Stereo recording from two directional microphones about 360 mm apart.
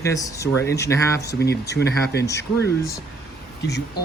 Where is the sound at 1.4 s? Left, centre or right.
Left.